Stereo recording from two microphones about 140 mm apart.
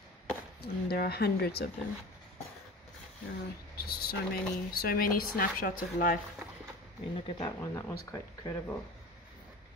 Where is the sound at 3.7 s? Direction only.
90° left.